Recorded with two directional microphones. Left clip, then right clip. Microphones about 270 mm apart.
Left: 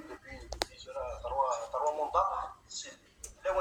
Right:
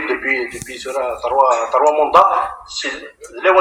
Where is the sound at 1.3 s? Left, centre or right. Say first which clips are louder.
Right 19 dB; right.